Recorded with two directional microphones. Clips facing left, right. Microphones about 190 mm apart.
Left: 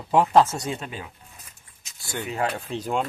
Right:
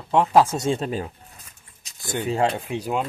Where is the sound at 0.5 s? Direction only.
30° right (ahead or behind).